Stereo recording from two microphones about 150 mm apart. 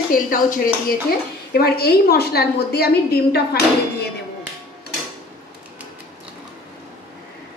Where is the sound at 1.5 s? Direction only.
90° left.